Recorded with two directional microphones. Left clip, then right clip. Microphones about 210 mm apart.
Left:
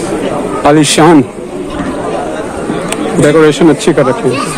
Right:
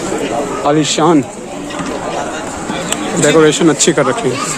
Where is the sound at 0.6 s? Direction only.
30° left (ahead or behind).